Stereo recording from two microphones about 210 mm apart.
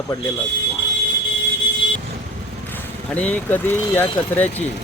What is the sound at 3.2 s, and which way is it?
Speech, 10° left (ahead or behind).